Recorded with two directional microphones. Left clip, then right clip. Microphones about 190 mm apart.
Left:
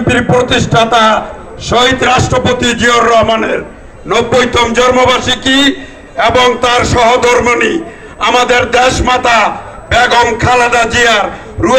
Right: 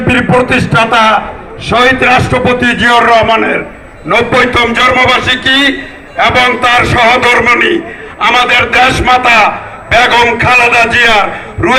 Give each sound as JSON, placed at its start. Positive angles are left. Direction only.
{"t": 0.1, "sound": "a man's voice", "side_deg": 40}